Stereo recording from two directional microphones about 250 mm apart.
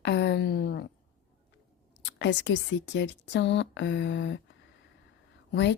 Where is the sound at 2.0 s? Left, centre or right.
Left.